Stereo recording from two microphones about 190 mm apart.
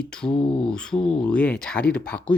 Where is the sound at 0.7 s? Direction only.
5° left (ahead or behind).